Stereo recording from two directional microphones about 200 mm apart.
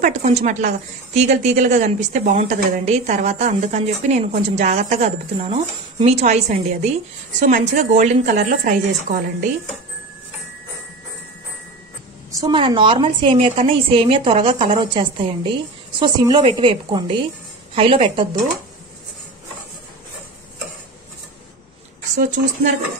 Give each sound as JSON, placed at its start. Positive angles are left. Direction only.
{"t": 0.0, "sound": "a woman's voice", "side_deg": -35}
{"t": 12.4, "sound": "a woman's voice", "side_deg": -25}
{"t": 22.1, "sound": "a woman's voice", "side_deg": -40}